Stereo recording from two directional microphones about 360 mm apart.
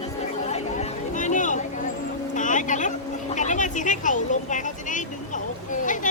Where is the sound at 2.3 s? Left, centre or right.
Left.